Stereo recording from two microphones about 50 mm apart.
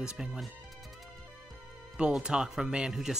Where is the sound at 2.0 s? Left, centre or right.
Centre.